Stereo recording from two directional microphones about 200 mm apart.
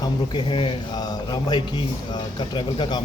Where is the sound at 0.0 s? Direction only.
25° left (ahead or behind).